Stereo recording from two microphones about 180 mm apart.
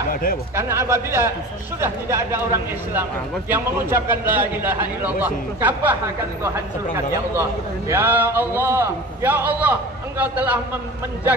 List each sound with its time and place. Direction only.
0.1 s speech: 55° left (ahead or behind)
0.6 s a man's voice: 15° right (ahead or behind)
7.9 s a man's voice: 10° right (ahead or behind)